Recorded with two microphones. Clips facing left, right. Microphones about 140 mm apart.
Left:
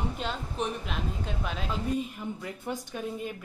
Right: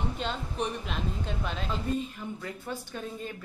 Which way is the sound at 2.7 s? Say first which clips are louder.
Left 3 dB; 20° left (ahead or behind).